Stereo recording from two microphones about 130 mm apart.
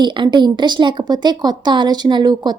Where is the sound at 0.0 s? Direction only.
35° right (ahead or behind).